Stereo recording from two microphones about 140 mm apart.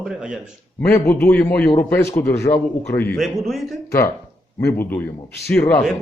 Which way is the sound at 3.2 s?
Centre (ahead or behind).